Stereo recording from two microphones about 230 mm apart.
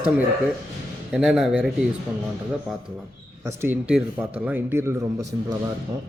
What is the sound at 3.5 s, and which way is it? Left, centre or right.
Speech, centre.